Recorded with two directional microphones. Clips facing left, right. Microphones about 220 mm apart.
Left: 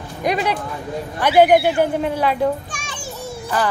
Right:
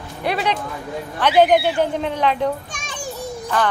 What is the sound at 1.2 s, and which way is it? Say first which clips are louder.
A child's voice: left 2 dB; 10° left (ahead or behind).